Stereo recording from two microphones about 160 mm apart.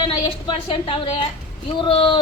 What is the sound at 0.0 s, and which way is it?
A woman's voice, 35° left (ahead or behind).